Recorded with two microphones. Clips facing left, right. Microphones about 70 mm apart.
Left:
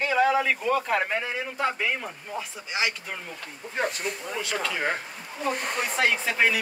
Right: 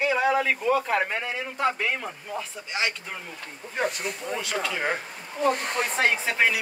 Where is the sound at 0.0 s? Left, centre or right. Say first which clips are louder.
Even; centre.